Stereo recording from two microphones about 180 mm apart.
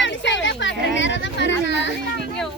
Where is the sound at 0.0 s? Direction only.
90° left.